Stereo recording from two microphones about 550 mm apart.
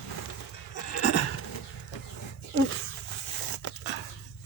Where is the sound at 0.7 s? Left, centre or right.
Left.